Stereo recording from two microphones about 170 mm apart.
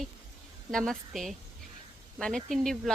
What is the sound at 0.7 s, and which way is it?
Speech, 5° left (ahead or behind).